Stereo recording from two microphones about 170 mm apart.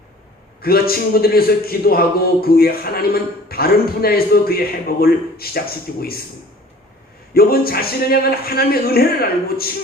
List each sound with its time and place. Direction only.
0.6 s a man's voice: 65° left (ahead or behind)
7.3 s a man's voice: 65° left (ahead or behind)